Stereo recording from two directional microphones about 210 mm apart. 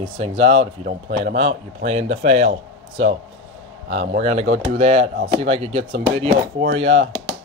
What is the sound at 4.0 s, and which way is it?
Speech, 30° right (ahead or behind).